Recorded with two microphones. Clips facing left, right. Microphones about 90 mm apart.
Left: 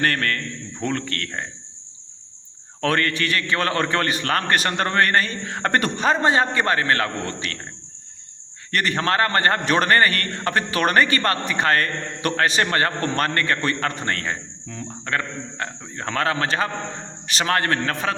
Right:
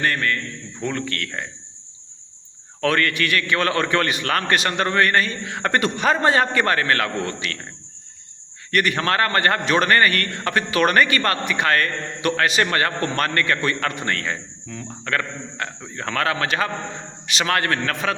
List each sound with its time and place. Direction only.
0.0 s a man's voice: 55° left (ahead or behind)
0.8 s a man's voice: 45° left (ahead or behind)
2.8 s a man's voice: 35° left (ahead or behind)
6.1 s a man's voice: 25° left (ahead or behind)
8.7 s a man's voice: 35° left (ahead or behind)